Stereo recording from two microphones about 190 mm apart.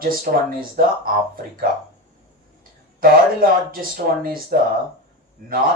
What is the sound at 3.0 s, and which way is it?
Speech, 50° right (ahead or behind).